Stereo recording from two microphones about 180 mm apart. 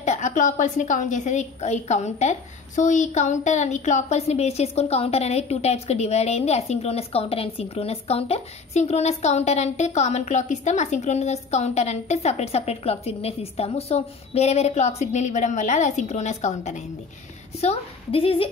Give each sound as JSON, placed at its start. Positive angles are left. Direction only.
{"t": 0.0, "sound": "a woman's voice", "side_deg": 40}